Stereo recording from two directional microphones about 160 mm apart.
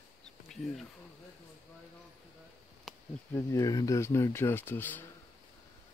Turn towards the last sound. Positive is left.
turn(degrees=10)  # may be behind; listen again after turning